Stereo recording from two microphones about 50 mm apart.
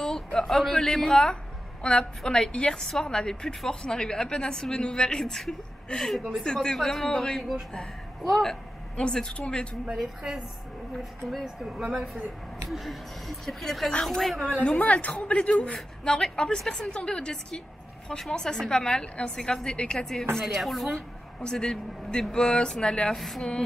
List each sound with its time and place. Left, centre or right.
0.0 s a woman's voice: centre
6.8 s a woman's voice: centre
8.2 s speech: centre
8.5 s speech: centre
9.8 s a woman's voice: centre
11.7 s a woman's voice: centre
14.8 s a woman's voice: left
20.4 s speech: centre
21.4 s a woman's voice: centre
23.1 s speech: centre